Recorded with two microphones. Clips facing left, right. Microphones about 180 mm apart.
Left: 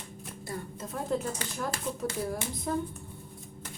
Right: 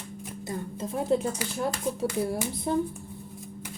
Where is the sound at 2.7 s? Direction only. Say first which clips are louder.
Right 5 dB; 25° right (ahead or behind).